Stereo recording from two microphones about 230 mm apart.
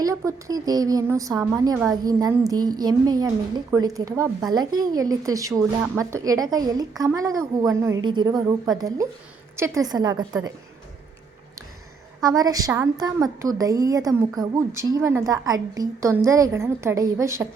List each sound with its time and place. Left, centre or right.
0.0 s speech: centre
12.2 s speech: centre